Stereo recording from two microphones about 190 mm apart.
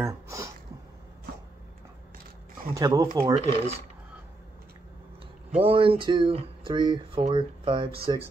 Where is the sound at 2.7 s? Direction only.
20° right (ahead or behind).